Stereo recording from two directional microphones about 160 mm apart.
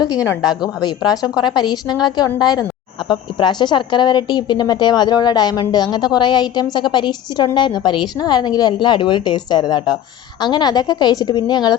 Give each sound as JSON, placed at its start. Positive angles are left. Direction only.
{"t": 0.0, "sound": "a woman's voice", "side_deg": 20}